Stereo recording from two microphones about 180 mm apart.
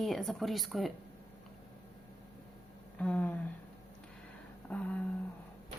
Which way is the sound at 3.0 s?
10° left (ahead or behind).